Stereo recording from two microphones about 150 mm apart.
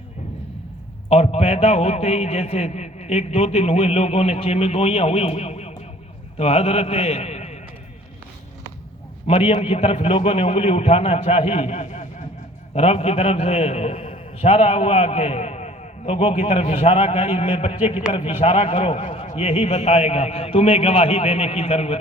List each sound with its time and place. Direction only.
1.1 s a man's voice: 45° left (ahead or behind)
9.2 s a man's voice: 40° left (ahead or behind)